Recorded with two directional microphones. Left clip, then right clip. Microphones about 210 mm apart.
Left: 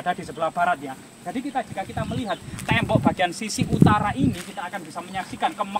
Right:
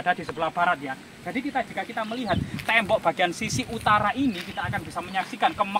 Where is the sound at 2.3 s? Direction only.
15° left (ahead or behind).